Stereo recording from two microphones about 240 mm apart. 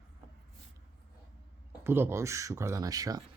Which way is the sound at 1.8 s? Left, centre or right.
Centre.